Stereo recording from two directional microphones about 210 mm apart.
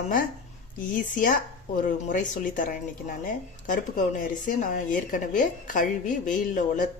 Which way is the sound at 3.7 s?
40° left (ahead or behind).